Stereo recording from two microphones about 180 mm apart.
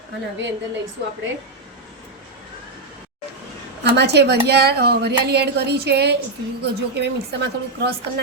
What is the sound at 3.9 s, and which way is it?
A woman's voice, 70° right (ahead or behind).